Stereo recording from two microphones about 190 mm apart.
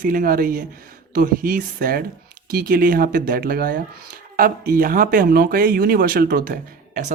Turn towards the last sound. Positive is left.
turn(degrees=-50)  # may be behind; listen again after turning